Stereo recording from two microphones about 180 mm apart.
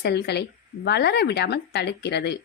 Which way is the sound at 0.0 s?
65° left (ahead or behind).